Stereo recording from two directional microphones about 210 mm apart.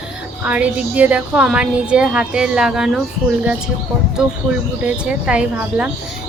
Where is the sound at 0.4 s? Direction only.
5° right (ahead or behind).